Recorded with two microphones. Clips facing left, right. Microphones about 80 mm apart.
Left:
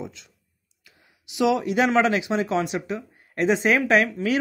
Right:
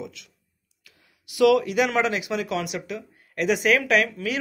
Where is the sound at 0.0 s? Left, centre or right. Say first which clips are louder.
Left 1 dB; left.